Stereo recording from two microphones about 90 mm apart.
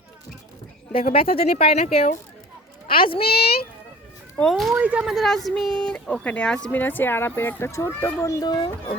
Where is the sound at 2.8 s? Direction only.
80° left.